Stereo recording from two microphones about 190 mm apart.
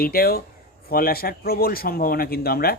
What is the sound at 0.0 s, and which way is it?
A man's voice, 50° left (ahead or behind).